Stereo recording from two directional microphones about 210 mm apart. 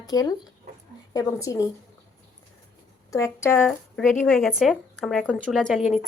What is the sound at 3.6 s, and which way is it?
Speech, centre (ahead or behind).